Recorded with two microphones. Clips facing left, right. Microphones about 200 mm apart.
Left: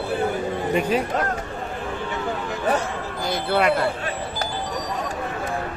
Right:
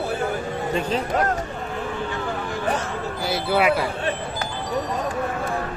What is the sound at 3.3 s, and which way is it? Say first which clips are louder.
Speech: even; 5° right (ahead or behind).